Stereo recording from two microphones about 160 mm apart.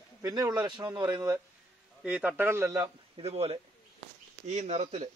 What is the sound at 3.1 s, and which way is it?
Speech, 40° right (ahead or behind).